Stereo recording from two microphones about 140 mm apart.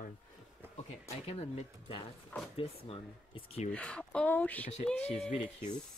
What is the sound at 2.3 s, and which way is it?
Speech, 10° left (ahead or behind).